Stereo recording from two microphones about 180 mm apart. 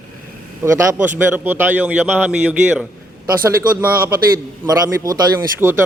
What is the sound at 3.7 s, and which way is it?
A man's voice, 15° right (ahead or behind).